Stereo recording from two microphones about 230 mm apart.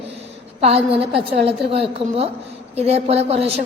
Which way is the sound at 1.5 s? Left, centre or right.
Right.